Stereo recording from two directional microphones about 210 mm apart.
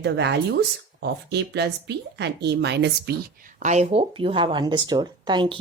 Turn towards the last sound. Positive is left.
turn(degrees=-20)  # may be behind; listen again after turning